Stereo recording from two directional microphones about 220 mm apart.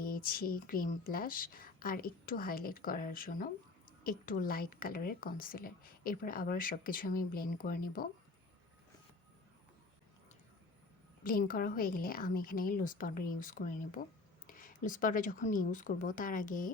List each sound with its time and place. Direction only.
0.0 s speech: 40° left (ahead or behind)
11.2 s speech: 40° left (ahead or behind)